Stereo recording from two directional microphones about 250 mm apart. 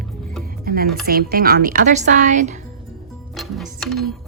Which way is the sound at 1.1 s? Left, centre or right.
Right.